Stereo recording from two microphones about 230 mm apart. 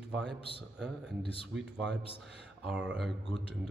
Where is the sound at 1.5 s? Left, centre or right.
Right.